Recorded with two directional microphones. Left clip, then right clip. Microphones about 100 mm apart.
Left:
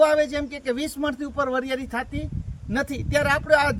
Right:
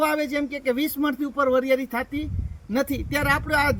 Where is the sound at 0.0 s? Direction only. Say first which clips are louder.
Left 4 dB; 15° left (ahead or behind).